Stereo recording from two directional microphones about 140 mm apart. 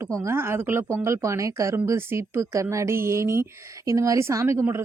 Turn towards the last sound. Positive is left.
turn(degrees=-20)  # may be behind; listen again after turning